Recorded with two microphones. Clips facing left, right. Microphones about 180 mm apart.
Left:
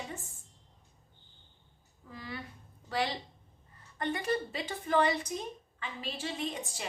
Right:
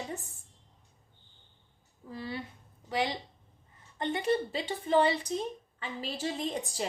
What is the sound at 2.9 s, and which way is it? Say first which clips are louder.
A woman's voice: right 2 dB; 20° right (ahead or behind).